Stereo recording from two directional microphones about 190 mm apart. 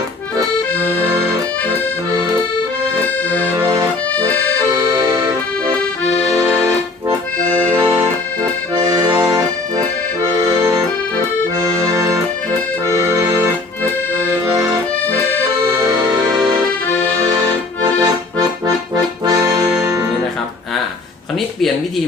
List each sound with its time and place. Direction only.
3.5 s accordion: 15° right (ahead or behind)
4.1 s accordion: 10° left (ahead or behind)
7.7 s accordion: 10° right (ahead or behind)
8.7 s accordion: 20° right (ahead or behind)
9.1 s accordion: 5° right (ahead or behind)
10.6 s accordion: 15° right (ahead or behind)
11.9 s accordion: 15° right (ahead or behind)
15.0 s accordion: 10° left (ahead or behind)
18.0 s accordion: 20° right (ahead or behind)
19.8 s music: 15° right (ahead or behind)